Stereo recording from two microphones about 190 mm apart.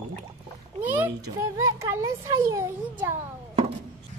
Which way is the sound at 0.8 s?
10° right (ahead or behind).